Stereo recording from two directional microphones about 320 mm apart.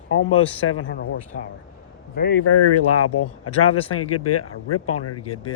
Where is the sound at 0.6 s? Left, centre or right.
Left.